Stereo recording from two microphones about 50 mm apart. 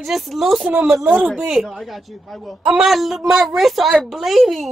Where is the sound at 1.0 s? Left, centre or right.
Right.